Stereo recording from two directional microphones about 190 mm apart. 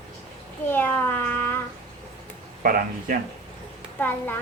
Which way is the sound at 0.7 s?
10° left (ahead or behind).